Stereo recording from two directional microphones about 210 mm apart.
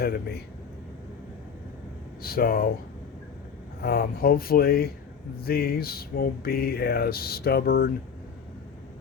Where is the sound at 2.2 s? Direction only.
45° left (ahead or behind).